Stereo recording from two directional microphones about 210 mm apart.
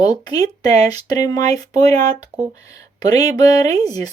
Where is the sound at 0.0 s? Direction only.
20° left (ahead or behind).